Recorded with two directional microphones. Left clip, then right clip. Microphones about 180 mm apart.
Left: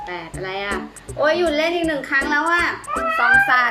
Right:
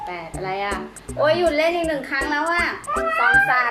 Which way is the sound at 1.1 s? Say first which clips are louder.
Even; 20° left (ahead or behind).